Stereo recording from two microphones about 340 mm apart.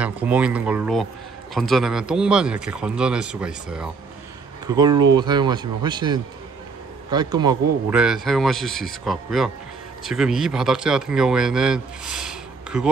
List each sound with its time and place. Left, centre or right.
0.0 s speech: centre